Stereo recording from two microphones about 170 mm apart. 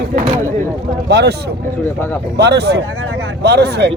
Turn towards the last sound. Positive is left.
turn(degrees=-80)